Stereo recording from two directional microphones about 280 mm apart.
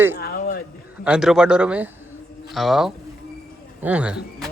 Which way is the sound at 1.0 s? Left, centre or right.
Centre.